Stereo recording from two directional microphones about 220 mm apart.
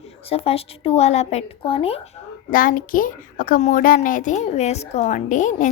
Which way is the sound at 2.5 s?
40° left (ahead or behind).